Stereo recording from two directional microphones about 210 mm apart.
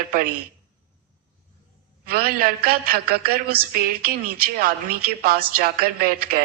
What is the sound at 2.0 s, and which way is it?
A woman's voice, 45° right (ahead or behind).